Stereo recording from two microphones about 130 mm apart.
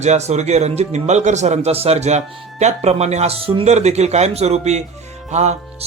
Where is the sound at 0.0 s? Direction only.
60° right (ahead or behind).